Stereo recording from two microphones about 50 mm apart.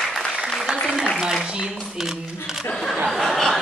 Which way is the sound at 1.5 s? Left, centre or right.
Centre.